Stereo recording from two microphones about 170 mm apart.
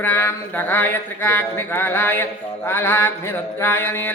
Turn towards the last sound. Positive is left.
turn(degrees=15)  # may be behind; listen again after turning